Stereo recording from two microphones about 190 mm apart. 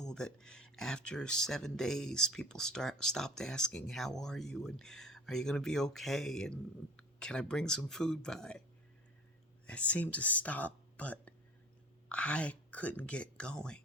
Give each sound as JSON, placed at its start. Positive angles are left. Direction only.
{"t": 0.0, "sound": "speech", "side_deg": 5}
{"t": 9.6, "sound": "speech", "side_deg": 5}